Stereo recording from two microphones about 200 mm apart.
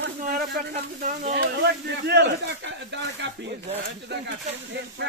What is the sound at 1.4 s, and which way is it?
Speech, 55° right (ahead or behind).